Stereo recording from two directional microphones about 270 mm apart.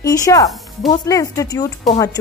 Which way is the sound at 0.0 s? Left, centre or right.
Centre.